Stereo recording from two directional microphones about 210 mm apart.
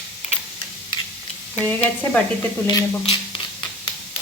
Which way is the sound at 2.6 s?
25° left (ahead or behind).